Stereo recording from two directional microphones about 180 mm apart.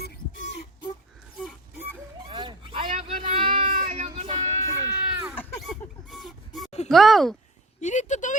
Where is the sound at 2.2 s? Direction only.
25° right (ahead or behind).